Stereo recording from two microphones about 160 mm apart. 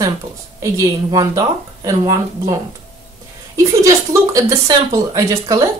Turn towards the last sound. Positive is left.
turn(degrees=-20)  # may be behind; listen again after turning